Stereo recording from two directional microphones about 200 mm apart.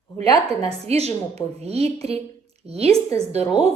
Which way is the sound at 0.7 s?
30° right (ahead or behind).